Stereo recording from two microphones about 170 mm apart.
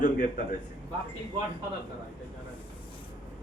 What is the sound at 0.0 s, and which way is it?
Speech, 50° left (ahead or behind).